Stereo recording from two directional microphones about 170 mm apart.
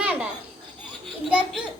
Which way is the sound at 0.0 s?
5° right (ahead or behind).